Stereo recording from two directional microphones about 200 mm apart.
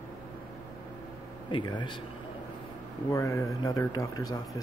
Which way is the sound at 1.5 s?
20° left (ahead or behind).